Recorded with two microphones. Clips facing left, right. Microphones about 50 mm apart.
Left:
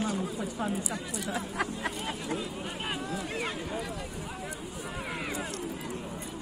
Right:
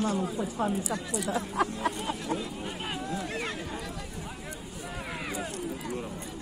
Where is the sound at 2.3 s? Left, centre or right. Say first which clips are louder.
Right 1 dB; centre.